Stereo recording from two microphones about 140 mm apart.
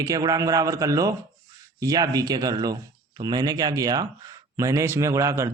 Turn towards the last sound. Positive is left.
turn(degrees=-20)  # may be behind; listen again after turning